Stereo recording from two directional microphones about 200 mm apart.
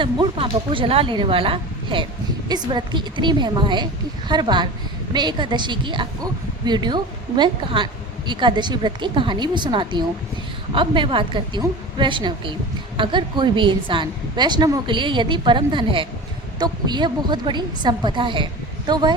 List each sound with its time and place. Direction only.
0.0 s a woman's voice: 25° right (ahead or behind)